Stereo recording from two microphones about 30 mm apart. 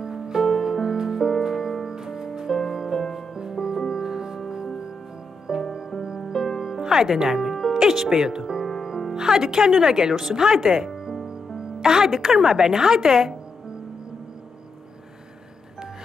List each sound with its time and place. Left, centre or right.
0.0 s music: right
6.8 s speech: centre
7.4 s music: centre
9.1 s speech: right
11.2 s music: right
12.1 s a woman's voice: centre
12.4 s speech: right